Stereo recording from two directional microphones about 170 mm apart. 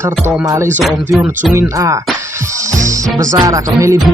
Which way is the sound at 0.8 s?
Centre (ahead or behind).